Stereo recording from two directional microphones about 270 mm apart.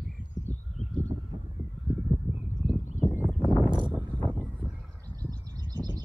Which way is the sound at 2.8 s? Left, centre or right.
Left.